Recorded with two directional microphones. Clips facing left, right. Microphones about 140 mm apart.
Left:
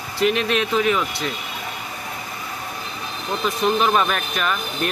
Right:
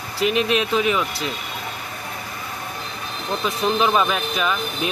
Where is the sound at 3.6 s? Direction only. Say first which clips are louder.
Even; centre (ahead or behind).